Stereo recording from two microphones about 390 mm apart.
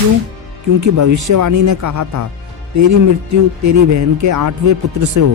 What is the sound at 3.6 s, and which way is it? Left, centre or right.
Speech, right.